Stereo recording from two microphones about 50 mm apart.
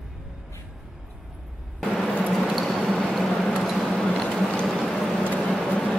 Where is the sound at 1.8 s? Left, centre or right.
Centre.